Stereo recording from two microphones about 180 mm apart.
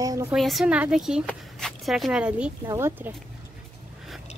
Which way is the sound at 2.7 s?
15° right (ahead or behind).